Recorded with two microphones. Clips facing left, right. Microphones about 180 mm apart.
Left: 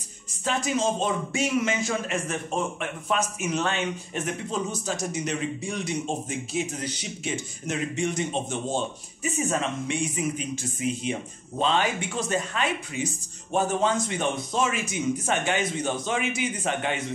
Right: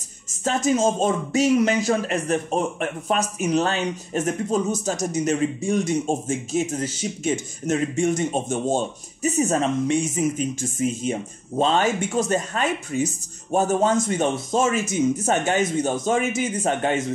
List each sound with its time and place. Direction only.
0.3 s speech: 45° right (ahead or behind)